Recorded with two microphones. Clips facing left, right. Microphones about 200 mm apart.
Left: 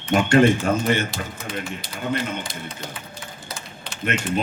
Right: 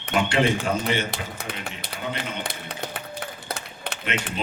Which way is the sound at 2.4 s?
65° right (ahead or behind).